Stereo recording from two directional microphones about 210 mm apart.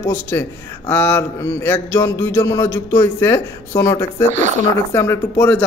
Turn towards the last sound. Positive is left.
turn(degrees=10)  # may be behind; listen again after turning